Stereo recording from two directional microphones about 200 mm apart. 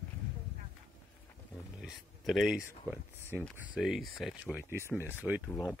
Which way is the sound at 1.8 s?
Centre (ahead or behind).